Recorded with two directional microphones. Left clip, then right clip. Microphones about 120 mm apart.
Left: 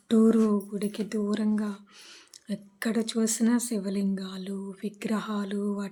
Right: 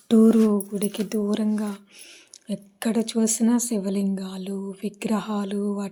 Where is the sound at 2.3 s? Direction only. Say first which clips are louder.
Right 5 dB; 20° right (ahead or behind).